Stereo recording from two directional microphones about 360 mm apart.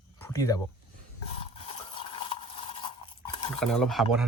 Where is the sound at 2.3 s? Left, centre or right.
Centre.